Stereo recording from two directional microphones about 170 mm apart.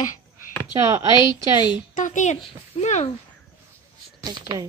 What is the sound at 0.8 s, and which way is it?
Speech, 20° right (ahead or behind).